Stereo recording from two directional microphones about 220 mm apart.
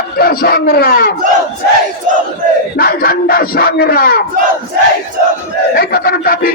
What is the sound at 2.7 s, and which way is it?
Speech, 45° left (ahead or behind).